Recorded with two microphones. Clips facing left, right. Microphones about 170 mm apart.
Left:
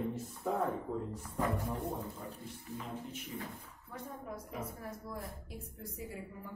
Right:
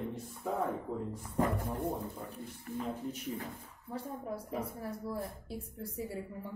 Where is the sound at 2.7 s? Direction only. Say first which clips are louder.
Right 6 dB; 60° right (ahead or behind).